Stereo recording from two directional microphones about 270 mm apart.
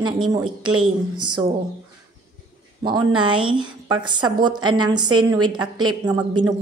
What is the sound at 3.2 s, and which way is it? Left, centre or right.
Speech, centre.